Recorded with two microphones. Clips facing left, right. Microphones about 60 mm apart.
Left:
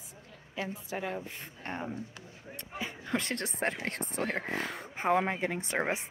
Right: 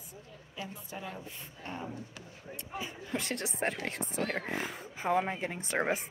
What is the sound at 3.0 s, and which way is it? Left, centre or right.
Speech, left.